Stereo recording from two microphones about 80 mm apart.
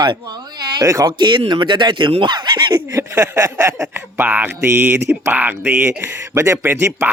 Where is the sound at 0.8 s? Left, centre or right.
Right.